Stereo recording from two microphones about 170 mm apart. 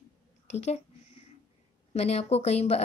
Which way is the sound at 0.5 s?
40° left (ahead or behind).